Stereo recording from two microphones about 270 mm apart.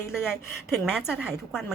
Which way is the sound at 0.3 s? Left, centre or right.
Centre.